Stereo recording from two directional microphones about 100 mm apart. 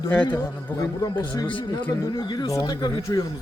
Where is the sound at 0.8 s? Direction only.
40° left (ahead or behind).